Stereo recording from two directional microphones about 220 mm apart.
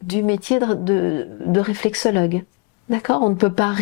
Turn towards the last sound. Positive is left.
turn(degrees=15)  # may be behind; listen again after turning